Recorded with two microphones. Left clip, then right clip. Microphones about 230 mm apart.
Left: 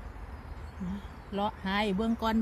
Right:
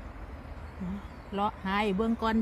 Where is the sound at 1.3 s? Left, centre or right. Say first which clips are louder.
Right 2 dB; centre.